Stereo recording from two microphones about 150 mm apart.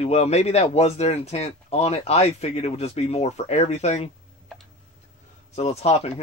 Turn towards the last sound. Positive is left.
turn(degrees=45)  # may be behind; listen again after turning